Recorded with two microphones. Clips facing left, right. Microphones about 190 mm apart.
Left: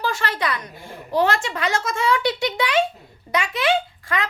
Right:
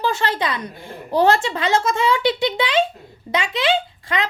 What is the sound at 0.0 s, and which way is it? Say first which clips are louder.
A woman's voice: right 3 dB; 25° right (ahead or behind).